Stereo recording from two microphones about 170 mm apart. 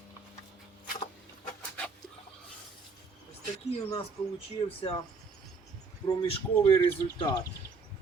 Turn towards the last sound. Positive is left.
turn(degrees=20)  # may be behind; listen again after turning